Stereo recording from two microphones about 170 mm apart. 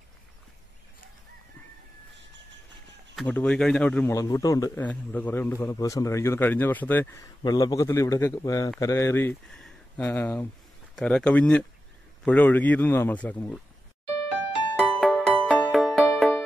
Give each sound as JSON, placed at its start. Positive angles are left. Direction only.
{"t": 3.2, "sound": "speech", "side_deg": 5}
{"t": 4.1, "sound": "a man's voice", "side_deg": 20}
{"t": 9.5, "sound": "a sound", "side_deg": 5}
{"t": 11.0, "sound": "a man's voice", "side_deg": 5}
{"t": 14.8, "sound": "music", "side_deg": 0}